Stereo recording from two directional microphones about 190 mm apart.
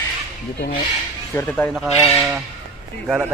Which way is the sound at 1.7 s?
Centre (ahead or behind).